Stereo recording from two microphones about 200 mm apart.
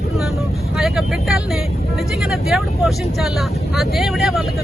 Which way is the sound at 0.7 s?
Centre (ahead or behind).